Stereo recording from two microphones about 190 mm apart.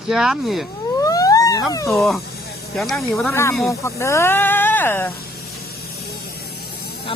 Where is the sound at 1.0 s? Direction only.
20° left (ahead or behind).